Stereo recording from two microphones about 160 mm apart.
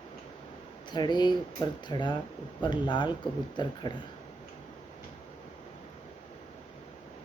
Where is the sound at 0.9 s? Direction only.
25° left (ahead or behind).